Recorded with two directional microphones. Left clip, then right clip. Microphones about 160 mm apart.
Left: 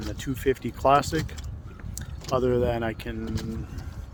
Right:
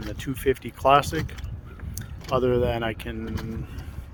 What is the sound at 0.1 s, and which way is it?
Speech, 25° left (ahead or behind).